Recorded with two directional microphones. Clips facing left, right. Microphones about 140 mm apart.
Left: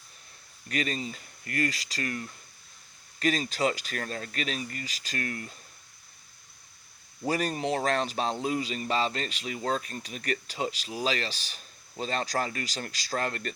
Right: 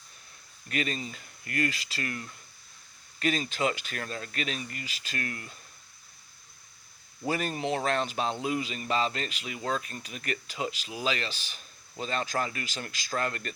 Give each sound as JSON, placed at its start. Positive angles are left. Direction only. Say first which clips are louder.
{"t": 0.7, "sound": "speech", "louder": "left 1 dB", "side_deg": 35}
{"t": 7.3, "sound": "speech", "louder": "left 1 dB", "side_deg": 40}